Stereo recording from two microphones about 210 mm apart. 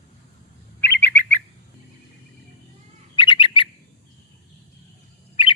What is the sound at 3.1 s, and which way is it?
Bird, 25° left (ahead or behind).